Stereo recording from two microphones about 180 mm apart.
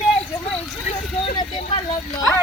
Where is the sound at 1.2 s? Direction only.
35° left (ahead or behind).